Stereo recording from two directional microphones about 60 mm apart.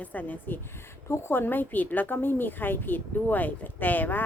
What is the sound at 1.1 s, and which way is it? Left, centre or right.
Speech, left.